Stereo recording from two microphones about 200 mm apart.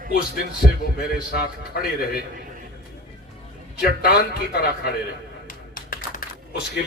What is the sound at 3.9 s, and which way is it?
A man's voice, 50° left (ahead or behind).